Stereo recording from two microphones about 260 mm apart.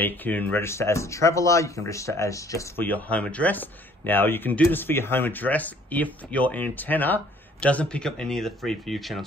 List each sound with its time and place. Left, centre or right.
0.0 s speech: centre